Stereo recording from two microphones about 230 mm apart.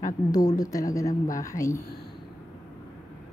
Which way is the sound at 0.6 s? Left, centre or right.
Centre.